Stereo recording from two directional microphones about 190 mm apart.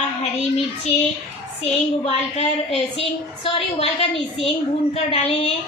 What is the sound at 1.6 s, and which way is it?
A woman's voice, 35° left (ahead or behind).